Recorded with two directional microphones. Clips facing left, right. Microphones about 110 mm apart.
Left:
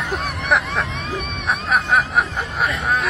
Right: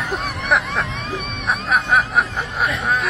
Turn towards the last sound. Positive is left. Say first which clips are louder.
# even
turn(degrees=0)  # may be behind; listen again after turning